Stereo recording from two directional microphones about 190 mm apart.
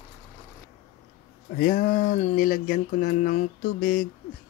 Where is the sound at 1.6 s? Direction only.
45° left (ahead or behind).